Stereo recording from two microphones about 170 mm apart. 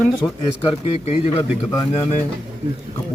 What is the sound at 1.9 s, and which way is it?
Speech, 35° left (ahead or behind).